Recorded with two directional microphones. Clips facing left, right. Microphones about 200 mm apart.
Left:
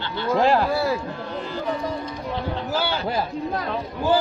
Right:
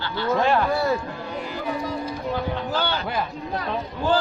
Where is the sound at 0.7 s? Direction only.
Centre (ahead or behind).